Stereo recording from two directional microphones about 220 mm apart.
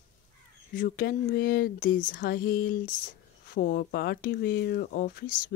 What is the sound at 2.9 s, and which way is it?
Speech, 40° left (ahead or behind).